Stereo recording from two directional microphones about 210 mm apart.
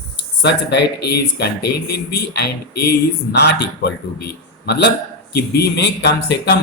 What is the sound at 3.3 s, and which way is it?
Speech, 50° left (ahead or behind).